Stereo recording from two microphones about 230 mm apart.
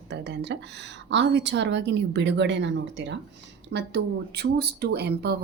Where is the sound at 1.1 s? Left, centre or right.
Right.